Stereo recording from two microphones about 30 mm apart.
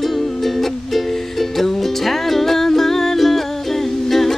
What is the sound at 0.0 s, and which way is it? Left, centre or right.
Music, centre.